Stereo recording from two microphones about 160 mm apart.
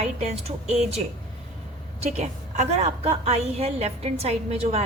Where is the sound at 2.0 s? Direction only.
45° right (ahead or behind).